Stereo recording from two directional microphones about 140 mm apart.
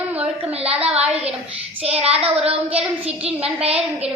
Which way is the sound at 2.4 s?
45° right (ahead or behind).